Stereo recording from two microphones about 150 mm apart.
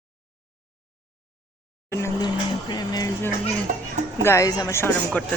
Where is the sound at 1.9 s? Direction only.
20° left (ahead or behind).